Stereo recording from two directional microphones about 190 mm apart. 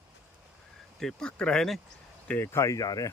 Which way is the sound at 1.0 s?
5° left (ahead or behind).